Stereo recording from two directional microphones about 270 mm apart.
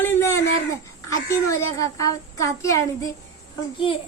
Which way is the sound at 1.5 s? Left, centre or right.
Centre.